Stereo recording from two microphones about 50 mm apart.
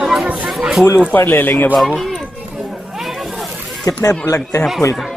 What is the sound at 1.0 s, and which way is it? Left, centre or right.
Speech, left.